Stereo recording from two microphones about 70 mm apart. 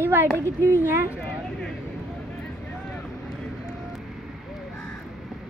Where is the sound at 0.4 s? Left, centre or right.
Right.